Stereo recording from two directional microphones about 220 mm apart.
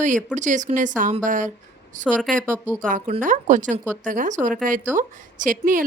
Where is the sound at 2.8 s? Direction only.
35° right (ahead or behind).